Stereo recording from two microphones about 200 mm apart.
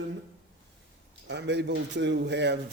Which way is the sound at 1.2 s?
60° right (ahead or behind).